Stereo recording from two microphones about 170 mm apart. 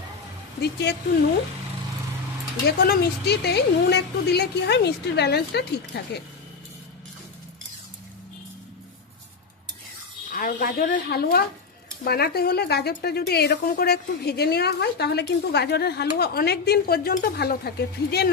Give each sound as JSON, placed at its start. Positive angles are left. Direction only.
{"t": 0.6, "sound": "a woman's voice", "side_deg": 75}
{"t": 2.6, "sound": "a woman's voice", "side_deg": 70}
{"t": 10.3, "sound": "a woman's voice", "side_deg": 60}